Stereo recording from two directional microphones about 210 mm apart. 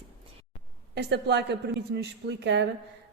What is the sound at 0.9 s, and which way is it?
Speech, 55° right (ahead or behind).